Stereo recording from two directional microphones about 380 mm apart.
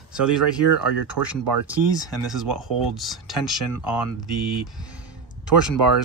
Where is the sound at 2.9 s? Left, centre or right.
Centre.